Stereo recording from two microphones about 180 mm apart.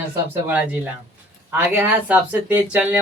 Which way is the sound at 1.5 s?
10° right (ahead or behind).